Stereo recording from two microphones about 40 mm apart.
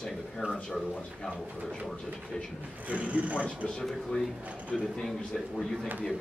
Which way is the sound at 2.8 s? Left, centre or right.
Right.